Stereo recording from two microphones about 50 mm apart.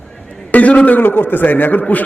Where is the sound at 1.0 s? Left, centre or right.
Left.